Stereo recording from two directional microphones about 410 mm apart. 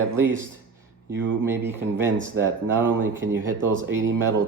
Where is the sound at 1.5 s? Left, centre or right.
Centre.